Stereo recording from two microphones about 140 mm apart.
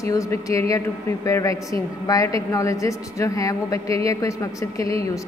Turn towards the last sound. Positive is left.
turn(degrees=25)  # may be behind; listen again after turning